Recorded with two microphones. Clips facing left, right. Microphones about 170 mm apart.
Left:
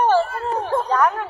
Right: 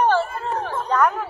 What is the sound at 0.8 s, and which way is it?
Chatter, 10° left (ahead or behind).